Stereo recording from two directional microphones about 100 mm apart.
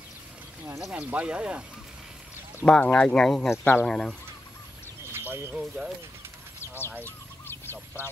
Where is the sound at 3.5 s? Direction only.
20° left (ahead or behind).